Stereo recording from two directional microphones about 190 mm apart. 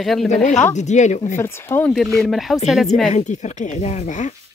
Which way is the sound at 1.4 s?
10° left (ahead or behind).